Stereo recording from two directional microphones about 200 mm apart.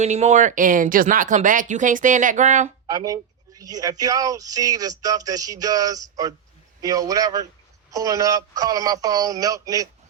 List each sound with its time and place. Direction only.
0.0 s speech: 35° right (ahead or behind)
2.8 s speech: 15° right (ahead or behind)